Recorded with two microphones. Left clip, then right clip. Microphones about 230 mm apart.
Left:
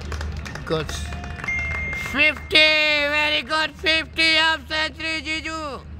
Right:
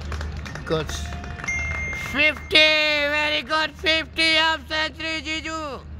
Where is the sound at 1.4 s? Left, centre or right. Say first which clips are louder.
Left 1 dB; left.